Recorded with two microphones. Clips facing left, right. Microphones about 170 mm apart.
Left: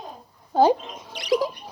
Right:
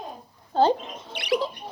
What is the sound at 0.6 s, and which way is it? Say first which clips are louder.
Speech: left 3 dB; 10° left (ahead or behind).